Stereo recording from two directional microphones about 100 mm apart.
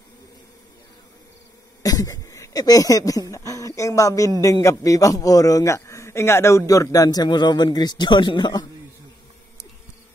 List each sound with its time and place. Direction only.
1.8 s a man's voice: 40° left (ahead or behind)